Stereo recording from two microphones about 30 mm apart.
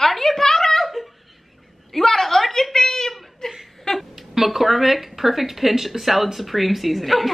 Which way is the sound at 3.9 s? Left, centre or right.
Left.